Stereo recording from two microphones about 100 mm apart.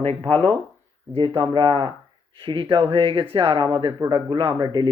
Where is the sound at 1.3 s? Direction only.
50° right (ahead or behind).